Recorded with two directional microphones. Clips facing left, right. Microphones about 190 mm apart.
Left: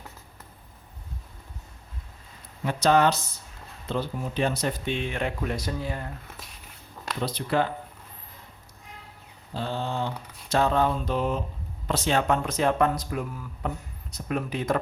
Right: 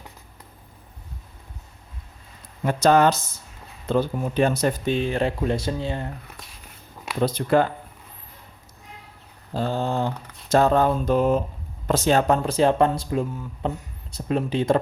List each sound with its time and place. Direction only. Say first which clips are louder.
2.6 s speech: right 4 dB; 45° right (ahead or behind); by 6.1 s 25° right (ahead or behind)
6.2 s speech: right 1 dB; centre (ahead or behind)
7.2 s speech: right 6 dB; 50° right (ahead or behind)
9.5 s speech: right 6 dB; 45° right (ahead or behind); by 14.8 s 30° right (ahead or behind)